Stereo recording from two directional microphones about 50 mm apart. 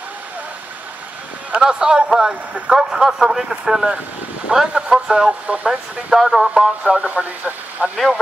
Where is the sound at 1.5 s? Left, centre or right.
Centre.